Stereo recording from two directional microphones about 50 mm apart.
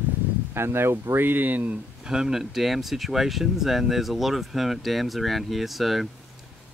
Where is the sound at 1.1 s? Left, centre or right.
Right.